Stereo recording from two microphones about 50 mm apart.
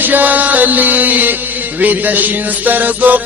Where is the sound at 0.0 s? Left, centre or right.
Right.